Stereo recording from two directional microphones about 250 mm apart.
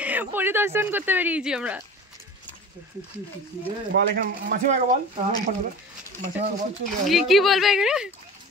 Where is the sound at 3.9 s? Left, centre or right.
Right.